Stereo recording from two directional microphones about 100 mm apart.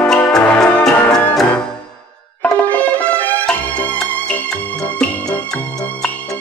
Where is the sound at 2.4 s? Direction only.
15° left (ahead or behind).